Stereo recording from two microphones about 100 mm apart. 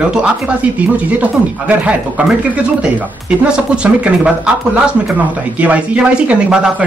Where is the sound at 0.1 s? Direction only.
10° right (ahead or behind).